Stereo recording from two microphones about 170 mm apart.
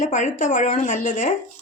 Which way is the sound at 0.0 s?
45° left (ahead or behind).